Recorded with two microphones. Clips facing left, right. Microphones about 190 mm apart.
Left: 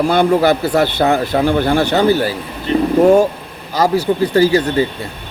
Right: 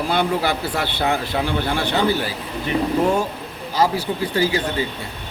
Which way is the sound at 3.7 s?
40° left (ahead or behind).